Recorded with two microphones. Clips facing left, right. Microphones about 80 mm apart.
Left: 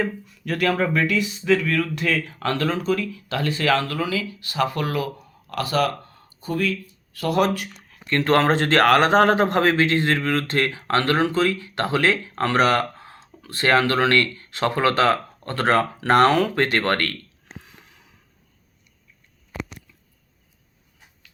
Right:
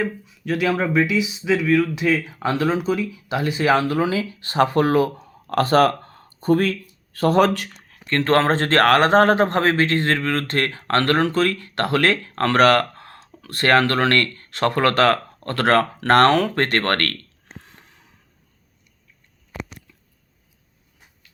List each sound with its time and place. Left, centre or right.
0.0 s speech: centre; by 7.5 s right
7.5 s speech: right
7.8 s speech: right
9.7 s speech: right
17.6 s a sound: right